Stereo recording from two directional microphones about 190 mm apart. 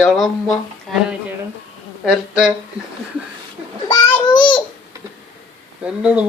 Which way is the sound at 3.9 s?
20° left (ahead or behind).